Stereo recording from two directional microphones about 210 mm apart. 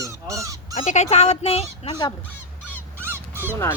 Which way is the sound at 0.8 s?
30° left (ahead or behind).